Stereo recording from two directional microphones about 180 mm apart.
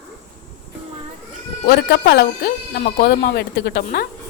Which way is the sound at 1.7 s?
65° left (ahead or behind).